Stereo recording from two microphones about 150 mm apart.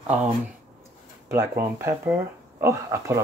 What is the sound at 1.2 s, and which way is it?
Speech, 20° right (ahead or behind).